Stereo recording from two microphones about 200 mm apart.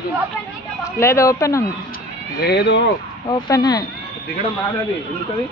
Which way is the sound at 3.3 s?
20° left (ahead or behind).